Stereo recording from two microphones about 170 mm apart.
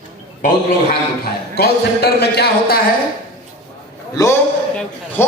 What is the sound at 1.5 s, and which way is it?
A man's voice, 70° left (ahead or behind).